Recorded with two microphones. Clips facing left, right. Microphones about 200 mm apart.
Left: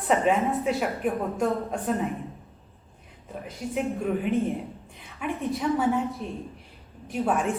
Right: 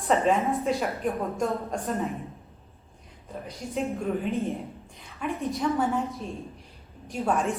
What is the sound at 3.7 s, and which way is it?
A woman's voice, centre (ahead or behind).